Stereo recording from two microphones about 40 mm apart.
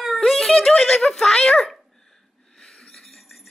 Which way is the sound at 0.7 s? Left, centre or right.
Left.